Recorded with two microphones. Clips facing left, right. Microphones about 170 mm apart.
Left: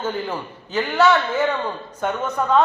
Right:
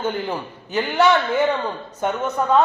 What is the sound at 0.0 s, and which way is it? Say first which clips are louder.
A man's voice: right 1 dB; 15° right (ahead or behind).